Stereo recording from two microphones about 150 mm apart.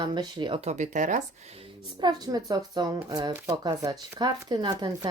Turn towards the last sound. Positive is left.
turn(degrees=-30)  # may be behind; listen again after turning